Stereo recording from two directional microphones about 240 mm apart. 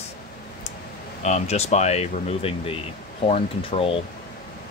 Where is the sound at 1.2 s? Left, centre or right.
Left.